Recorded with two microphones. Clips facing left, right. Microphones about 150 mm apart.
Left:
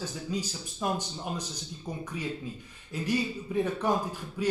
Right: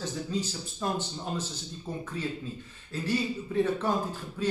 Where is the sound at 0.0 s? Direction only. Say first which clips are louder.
Right 2 dB; 10° left (ahead or behind).